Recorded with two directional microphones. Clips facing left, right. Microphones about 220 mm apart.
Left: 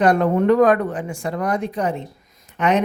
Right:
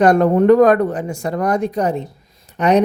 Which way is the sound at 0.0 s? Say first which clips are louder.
Right 4 dB; 45° right (ahead or behind).